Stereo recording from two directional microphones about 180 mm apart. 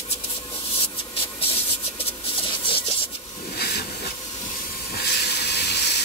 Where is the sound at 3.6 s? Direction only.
65° left (ahead or behind).